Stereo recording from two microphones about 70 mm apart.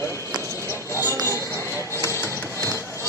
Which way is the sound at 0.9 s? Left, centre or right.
Left.